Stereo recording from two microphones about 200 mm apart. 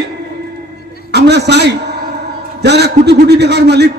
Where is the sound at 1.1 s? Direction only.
55° right (ahead or behind).